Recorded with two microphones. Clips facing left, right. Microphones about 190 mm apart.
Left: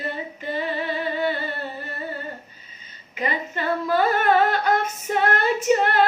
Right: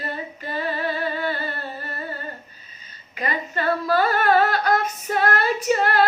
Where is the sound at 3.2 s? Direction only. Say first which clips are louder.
Even; 20° left (ahead or behind).